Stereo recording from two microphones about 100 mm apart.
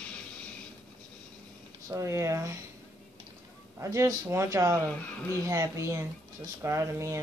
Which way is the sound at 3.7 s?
30° right (ahead or behind).